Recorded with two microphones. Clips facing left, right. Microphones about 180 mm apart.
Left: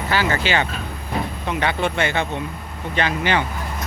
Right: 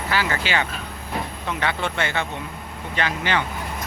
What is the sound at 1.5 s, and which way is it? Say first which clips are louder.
Speech: left 4 dB; 15° left (ahead or behind).